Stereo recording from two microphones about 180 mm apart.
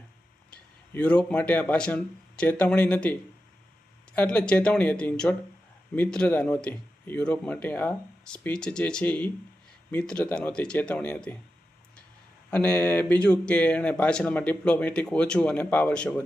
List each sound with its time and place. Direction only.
0.5 s speech: 5° left (ahead or behind)
12.5 s speech: 10° left (ahead or behind)